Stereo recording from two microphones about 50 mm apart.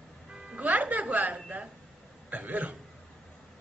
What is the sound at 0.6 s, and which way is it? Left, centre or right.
A woman's voice, right.